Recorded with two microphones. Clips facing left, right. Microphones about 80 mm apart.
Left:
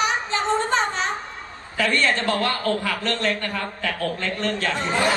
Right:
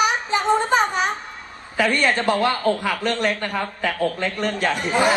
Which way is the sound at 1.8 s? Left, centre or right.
Centre.